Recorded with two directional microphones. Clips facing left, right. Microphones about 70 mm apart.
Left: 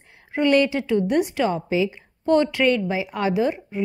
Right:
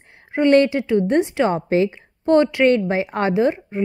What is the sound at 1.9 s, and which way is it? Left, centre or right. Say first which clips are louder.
Speech: right 3 dB; right.